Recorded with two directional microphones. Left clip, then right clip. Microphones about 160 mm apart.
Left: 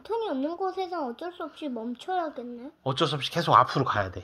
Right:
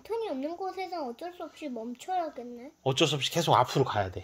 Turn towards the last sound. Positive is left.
turn(degrees=-30)  # may be behind; listen again after turning